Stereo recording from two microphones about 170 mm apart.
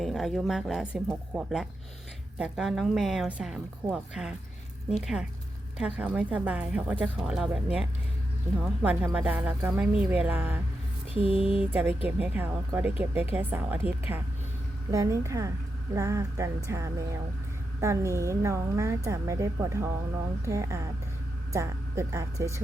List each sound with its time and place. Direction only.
0.0 s a woman's voice: centre (ahead or behind)
11.2 s a sound: 35° left (ahead or behind)
11.7 s a woman's voice: 10° right (ahead or behind)